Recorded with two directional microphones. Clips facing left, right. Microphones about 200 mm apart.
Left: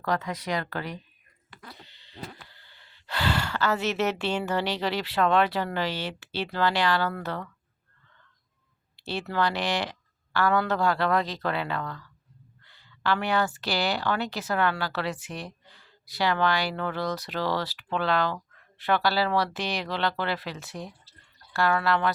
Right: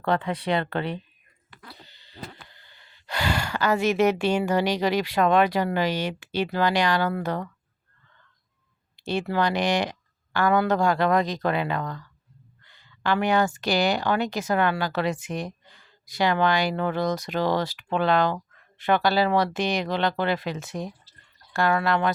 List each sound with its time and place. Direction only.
0.0 s speech: 30° right (ahead or behind)
1.9 s owl: 40° right (ahead or behind)
2.5 s speech: 15° right (ahead or behind)
9.0 s speech: 15° right (ahead or behind)